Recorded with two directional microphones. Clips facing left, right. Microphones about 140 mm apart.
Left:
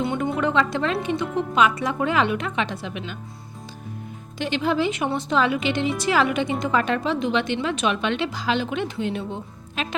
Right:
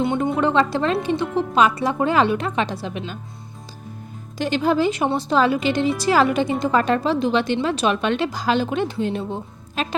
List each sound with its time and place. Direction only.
0.0 s music: 20° right (ahead or behind)
0.3 s speech: 35° right (ahead or behind)
1.2 s speech: centre (ahead or behind)
1.5 s a woman's voice: 35° right (ahead or behind)
4.4 s a woman's voice: 40° right (ahead or behind)